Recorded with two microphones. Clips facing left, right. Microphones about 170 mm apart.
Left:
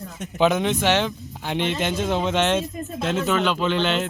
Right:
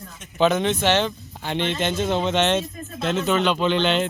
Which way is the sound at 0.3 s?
10° left (ahead or behind).